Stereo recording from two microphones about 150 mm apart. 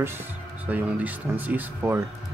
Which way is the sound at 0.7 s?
10° right (ahead or behind).